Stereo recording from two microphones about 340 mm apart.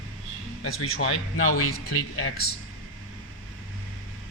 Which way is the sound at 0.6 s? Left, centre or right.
Left.